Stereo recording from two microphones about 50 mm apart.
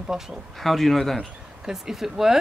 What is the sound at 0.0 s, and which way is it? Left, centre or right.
Speech, centre.